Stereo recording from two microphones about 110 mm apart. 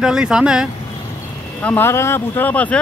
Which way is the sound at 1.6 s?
15° left (ahead or behind).